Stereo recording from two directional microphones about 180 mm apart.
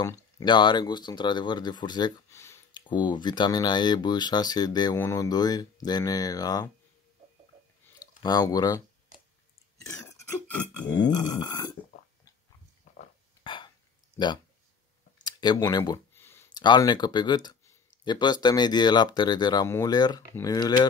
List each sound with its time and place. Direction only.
0.0 s speech: 20° left (ahead or behind)
2.9 s speech: 25° left (ahead or behind)
8.2 s speech: 20° left (ahead or behind)
10.5 s a sound: 5° left (ahead or behind)
11.3 s speech: 20° left (ahead or behind)
13.4 s hiccup: 25° left (ahead or behind)
14.1 s speech: 25° left (ahead or behind)
15.2 s a sound: 20° left (ahead or behind)
16.6 s speech: 25° left (ahead or behind)